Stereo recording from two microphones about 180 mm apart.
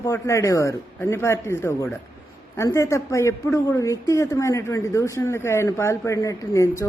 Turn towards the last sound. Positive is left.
turn(degrees=15)  # may be behind; listen again after turning